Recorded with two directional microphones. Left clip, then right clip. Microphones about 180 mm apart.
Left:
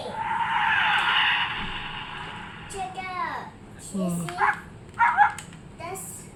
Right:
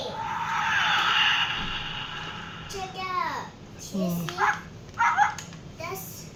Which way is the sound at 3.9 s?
20° left (ahead or behind).